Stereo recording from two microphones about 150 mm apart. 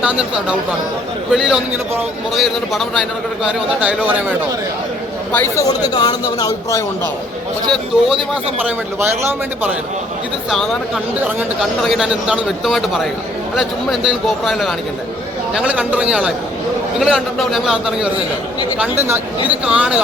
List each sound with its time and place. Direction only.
0.0 s a man's voice: 5° right (ahead or behind)
5.3 s speech: 15° left (ahead or behind)
5.6 s speech: 25° left (ahead or behind)
7.7 s a man's voice: centre (ahead or behind)
9.0 s a man's voice: 15° right (ahead or behind)
10.5 s a man's voice: centre (ahead or behind)
18.8 s a man's voice: 15° right (ahead or behind)